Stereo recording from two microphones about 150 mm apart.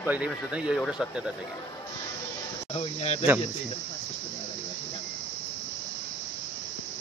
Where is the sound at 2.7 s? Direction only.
45° left (ahead or behind).